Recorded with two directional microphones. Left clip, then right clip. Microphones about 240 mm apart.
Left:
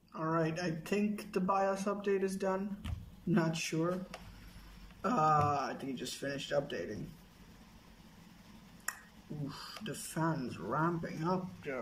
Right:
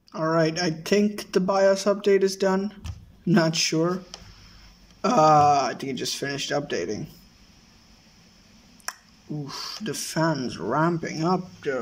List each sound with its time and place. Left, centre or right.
0.1 s speech: right
5.0 s speech: right
10.1 s speech: right